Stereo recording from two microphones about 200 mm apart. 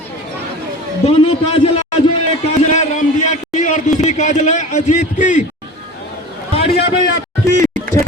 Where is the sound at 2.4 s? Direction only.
35° left (ahead or behind).